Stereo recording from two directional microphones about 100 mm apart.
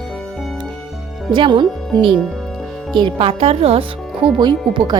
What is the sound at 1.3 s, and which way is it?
Speech, 55° right (ahead or behind).